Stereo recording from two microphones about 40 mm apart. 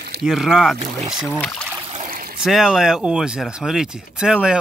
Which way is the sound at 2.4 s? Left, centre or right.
Centre.